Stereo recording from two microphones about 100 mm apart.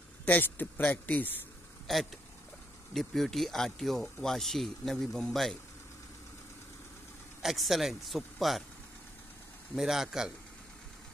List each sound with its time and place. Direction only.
0.3 s speech: 20° left (ahead or behind)
1.9 s speech: centre (ahead or behind)
7.4 s speech: centre (ahead or behind)
9.8 s speech: 5° right (ahead or behind)